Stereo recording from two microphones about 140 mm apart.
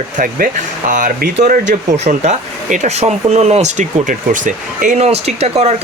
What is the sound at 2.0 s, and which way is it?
Speech, 60° right (ahead or behind).